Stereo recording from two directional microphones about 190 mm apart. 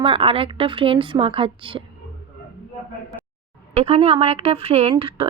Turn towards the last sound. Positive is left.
turn(degrees=-30)  # may be behind; listen again after turning